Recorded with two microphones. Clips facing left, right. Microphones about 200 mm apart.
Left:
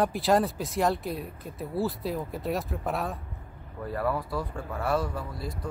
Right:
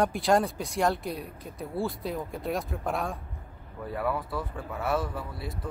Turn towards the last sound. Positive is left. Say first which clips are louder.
# left 1 dB
turn(degrees=-5)  # may be behind; listen again after turning